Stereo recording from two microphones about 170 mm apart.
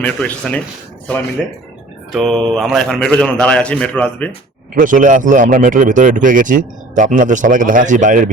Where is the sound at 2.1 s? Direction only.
Centre (ahead or behind).